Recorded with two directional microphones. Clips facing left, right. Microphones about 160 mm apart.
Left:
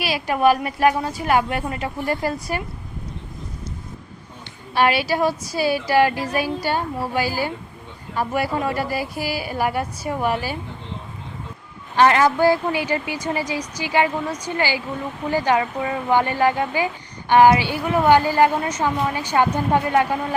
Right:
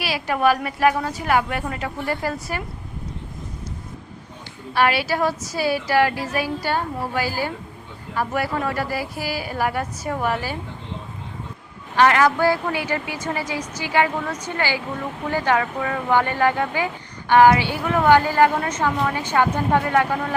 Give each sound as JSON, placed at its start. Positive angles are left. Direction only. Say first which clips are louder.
{"t": 0.0, "sound": "a woman's voice", "louder": "left 2 dB", "side_deg": 15}
{"t": 4.7, "sound": "speech", "louder": "left 1 dB", "side_deg": 20}
{"t": 11.9, "sound": "speech", "louder": "left 1 dB", "side_deg": 25}